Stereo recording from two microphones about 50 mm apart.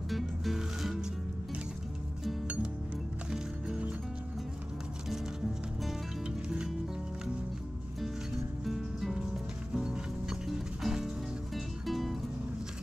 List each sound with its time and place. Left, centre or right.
0.1 s music: centre
2.4 s music: right
3.3 s music: centre
6.2 s music: centre
8.6 s music: centre
9.8 s music: centre